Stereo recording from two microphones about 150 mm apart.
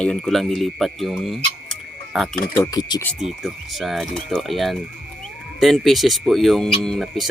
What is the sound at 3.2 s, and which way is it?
Speech, 5° right (ahead or behind).